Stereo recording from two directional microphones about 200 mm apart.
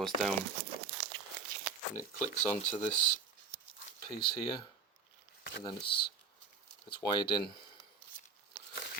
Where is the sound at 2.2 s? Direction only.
10° left (ahead or behind).